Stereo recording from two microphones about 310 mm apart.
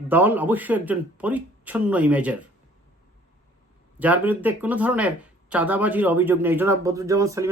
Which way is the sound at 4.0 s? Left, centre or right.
Centre.